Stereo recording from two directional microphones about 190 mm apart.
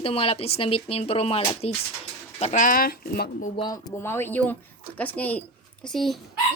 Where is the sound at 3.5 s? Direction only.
20° left (ahead or behind).